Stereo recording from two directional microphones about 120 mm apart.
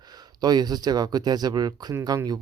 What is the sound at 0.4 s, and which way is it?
Speech, 35° right (ahead or behind).